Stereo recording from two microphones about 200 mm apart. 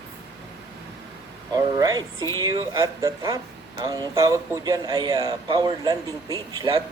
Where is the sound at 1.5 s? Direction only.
20° right (ahead or behind).